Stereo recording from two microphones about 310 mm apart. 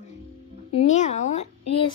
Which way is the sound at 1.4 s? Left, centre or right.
Left.